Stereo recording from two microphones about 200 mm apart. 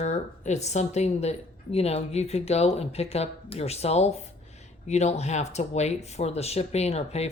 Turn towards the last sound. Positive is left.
turn(degrees=30)  # may be behind; listen again after turning